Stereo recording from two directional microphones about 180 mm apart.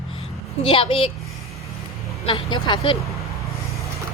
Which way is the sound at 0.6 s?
30° left (ahead or behind).